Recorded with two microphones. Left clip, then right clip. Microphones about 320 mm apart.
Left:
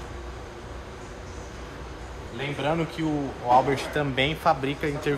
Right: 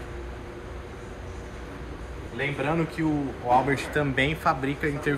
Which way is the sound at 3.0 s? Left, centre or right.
Centre.